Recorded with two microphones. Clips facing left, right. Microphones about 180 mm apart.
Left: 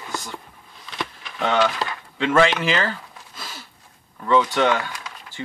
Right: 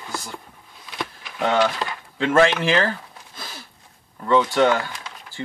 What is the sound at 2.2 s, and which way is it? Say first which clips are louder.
Speech: right 1 dB; 40° right (ahead or behind).